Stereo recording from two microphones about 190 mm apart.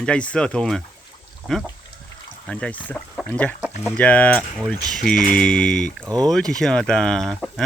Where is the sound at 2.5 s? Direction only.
5° left (ahead or behind).